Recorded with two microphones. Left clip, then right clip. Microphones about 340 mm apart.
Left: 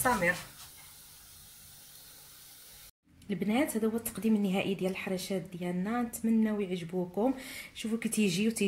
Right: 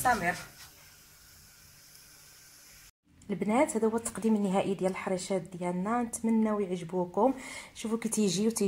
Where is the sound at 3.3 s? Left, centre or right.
Right.